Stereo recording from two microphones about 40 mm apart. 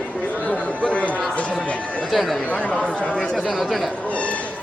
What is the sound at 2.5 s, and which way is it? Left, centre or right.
Speech, left.